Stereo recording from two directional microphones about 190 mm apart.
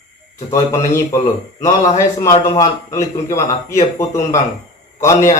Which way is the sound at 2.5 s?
15° left (ahead or behind).